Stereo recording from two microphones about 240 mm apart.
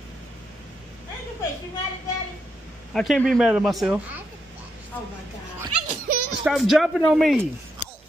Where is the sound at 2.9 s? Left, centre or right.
Centre.